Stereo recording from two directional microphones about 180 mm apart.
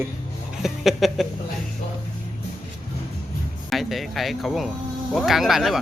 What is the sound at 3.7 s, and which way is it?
Speech, centre (ahead or behind).